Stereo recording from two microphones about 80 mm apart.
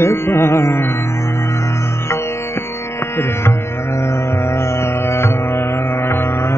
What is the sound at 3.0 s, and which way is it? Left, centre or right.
Music, left.